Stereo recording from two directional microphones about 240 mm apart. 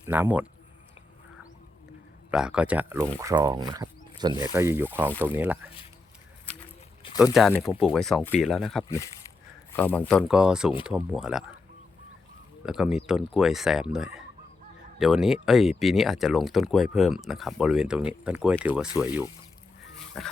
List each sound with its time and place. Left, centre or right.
0.0 s speech: centre
2.3 s speech: centre
7.0 s a sound: left
7.6 s speech: centre
12.6 s speech: centre
20.1 s speech: centre